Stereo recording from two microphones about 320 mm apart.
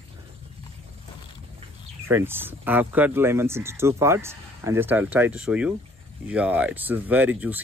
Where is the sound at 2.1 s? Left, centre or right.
Centre.